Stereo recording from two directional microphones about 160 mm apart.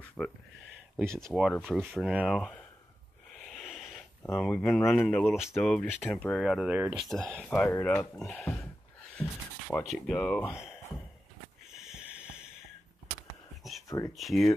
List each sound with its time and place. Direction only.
0.2 s speech: 5° left (ahead or behind)
3.3 s a sound: centre (ahead or behind)
4.2 s speech: 10° left (ahead or behind); by 7.1 s 10° right (ahead or behind)
7.1 s speech: centre (ahead or behind)
9.1 s a sound: 10° left (ahead or behind)
9.8 s speech: 5° left (ahead or behind)
10.5 s speech: 5° right (ahead or behind)
12.0 s a sound: 5° right (ahead or behind)
13.8 s speech: 20° left (ahead or behind)
14.1 s speech: centre (ahead or behind)